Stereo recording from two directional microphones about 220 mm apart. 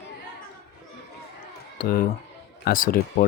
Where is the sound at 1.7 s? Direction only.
40° left (ahead or behind).